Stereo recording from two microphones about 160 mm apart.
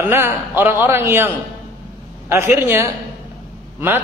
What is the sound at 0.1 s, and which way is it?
A man's voice, 15° right (ahead or behind).